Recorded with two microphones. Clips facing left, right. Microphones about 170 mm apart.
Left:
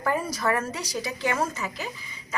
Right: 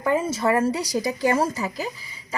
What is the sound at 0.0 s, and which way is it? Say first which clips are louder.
A woman's voice: right 4 dB; 20° right (ahead or behind).